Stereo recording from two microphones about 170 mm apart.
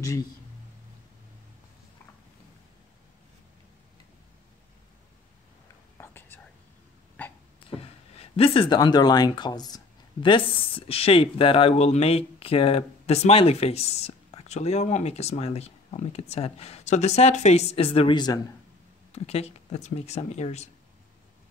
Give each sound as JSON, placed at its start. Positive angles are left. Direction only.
{"t": 0.0, "sound": "speech", "side_deg": 20}
{"t": 5.9, "sound": "whispering", "side_deg": 15}
{"t": 8.2, "sound": "speech", "side_deg": 35}
{"t": 19.1, "sound": "speech", "side_deg": 35}